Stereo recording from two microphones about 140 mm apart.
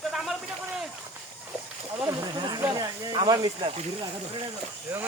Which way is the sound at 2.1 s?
30° right (ahead or behind).